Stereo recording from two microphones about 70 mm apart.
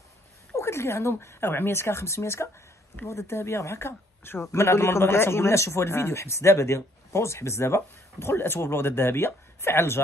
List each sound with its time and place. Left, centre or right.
0.6 s a woman's voice: left